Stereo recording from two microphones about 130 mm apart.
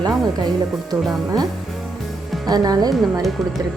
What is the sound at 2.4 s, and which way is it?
Speech, 30° right (ahead or behind).